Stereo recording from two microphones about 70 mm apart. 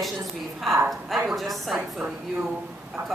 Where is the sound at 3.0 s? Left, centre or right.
Right.